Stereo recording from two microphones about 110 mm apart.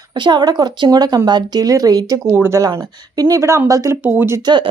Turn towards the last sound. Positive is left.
turn(degrees=-45)  # may be behind; listen again after turning